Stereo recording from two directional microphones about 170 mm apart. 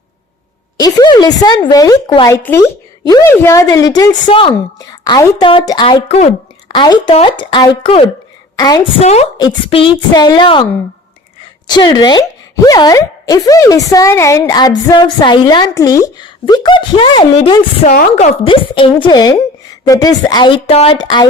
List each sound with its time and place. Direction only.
0.8 s speech: 20° left (ahead or behind)
9.0 s a woman's voice: 40° left (ahead or behind)
11.7 s speech: 25° left (ahead or behind)
17.8 s a woman's voice: 50° left (ahead or behind)
18.4 s speech: 30° left (ahead or behind)